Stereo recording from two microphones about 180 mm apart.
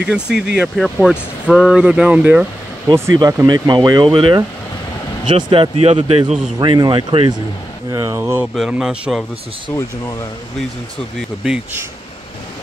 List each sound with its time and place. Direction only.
0.0 s speech: 5° right (ahead or behind)
3.2 s speech: 20° right (ahead or behind); by 9.2 s 5° right (ahead or behind)
9.7 s speech: 10° left (ahead or behind)
11.4 s speech: 5° right (ahead or behind)